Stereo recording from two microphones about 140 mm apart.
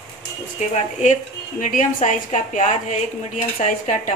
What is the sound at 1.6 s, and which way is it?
A woman's voice, 65° left (ahead or behind).